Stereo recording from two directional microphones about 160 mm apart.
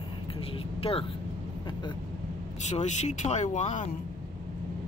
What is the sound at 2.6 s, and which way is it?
Speech, 45° left (ahead or behind).